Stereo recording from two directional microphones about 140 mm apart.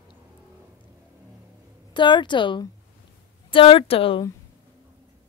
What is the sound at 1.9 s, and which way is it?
Speech, 35° left (ahead or behind).